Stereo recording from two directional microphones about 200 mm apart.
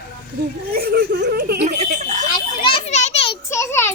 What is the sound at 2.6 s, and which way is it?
Children playing, 30° left (ahead or behind).